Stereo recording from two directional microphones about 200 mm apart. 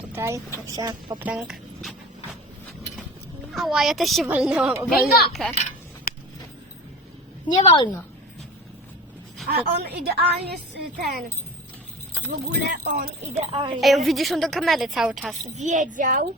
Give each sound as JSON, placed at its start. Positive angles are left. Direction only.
{"t": 0.0, "sound": "speech", "side_deg": -10}
{"t": 1.2, "sound": "speech", "side_deg": -5}
{"t": 3.5, "sound": "a woman's voice", "side_deg": 0}
{"t": 4.9, "sound": "a child's voice", "side_deg": 50}
{"t": 5.3, "sound": "a woman's voice", "side_deg": 0}
{"t": 7.5, "sound": "a woman's voice", "side_deg": 25}
{"t": 9.5, "sound": "a woman's voice", "side_deg": -55}
{"t": 12.5, "sound": "a woman's voice", "side_deg": -55}
{"t": 13.5, "sound": "a woman's voice", "side_deg": -25}
{"t": 13.8, "sound": "a woman's voice", "side_deg": 0}
{"t": 15.5, "sound": "speech", "side_deg": -35}